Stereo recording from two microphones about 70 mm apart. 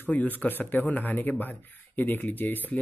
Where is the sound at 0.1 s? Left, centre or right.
Left.